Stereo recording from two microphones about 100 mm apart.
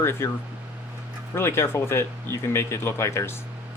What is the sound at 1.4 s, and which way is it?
Speech, 25° left (ahead or behind).